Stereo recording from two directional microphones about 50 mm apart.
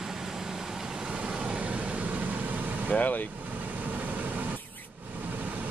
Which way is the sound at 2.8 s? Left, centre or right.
Left.